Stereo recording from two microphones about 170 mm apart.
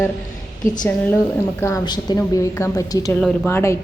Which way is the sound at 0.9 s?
10° left (ahead or behind).